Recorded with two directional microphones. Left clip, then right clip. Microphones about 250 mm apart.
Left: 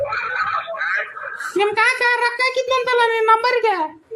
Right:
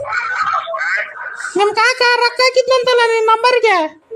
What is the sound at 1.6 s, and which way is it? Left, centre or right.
Speech, right.